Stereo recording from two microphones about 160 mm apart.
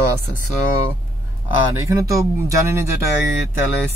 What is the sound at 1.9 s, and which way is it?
Speech, 20° right (ahead or behind).